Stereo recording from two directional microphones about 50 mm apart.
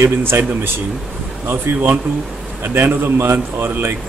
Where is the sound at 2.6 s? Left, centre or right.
Right.